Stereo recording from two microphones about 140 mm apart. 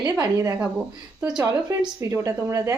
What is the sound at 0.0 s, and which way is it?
Speech, 20° right (ahead or behind).